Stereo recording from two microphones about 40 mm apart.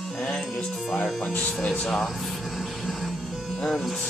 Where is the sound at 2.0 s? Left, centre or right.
Centre.